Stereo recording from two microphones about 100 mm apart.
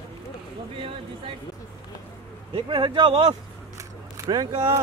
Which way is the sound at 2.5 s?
60° right (ahead or behind).